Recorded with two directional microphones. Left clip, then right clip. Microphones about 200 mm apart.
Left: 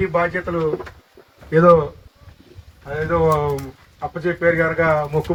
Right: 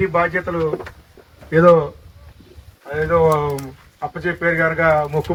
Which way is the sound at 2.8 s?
45° left (ahead or behind).